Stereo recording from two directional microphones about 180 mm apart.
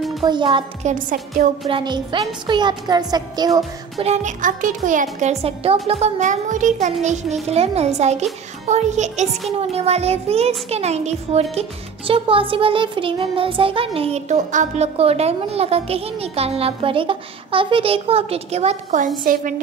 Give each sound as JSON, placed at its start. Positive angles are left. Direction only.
{"t": 0.2, "sound": "a woman's voice", "side_deg": -25}
{"t": 0.8, "sound": "a child's voice", "side_deg": -45}
{"t": 1.7, "sound": "a woman's voice", "side_deg": -25}
{"t": 4.0, "sound": "a child's voice", "side_deg": -40}
{"t": 5.2, "sound": "music", "side_deg": -35}